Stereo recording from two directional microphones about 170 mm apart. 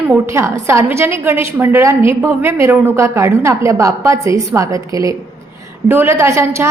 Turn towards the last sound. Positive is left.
turn(degrees=-15)  # may be behind; listen again after turning